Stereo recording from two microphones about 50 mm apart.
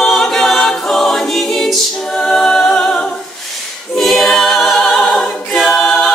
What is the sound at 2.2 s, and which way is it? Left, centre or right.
A capella, centre.